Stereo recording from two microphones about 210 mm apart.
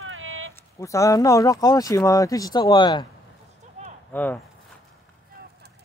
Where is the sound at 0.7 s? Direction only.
15° left (ahead or behind).